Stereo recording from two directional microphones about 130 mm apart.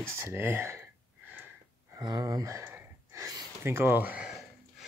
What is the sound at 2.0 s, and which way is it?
Gasp, 30° right (ahead or behind).